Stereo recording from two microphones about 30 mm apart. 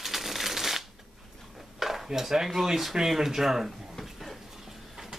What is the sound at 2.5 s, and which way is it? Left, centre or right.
Speech, centre.